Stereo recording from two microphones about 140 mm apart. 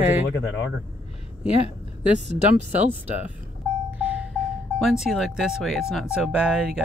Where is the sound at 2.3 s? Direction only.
50° right (ahead or behind).